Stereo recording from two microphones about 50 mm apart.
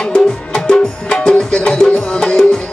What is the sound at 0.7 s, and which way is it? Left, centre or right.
Music, centre.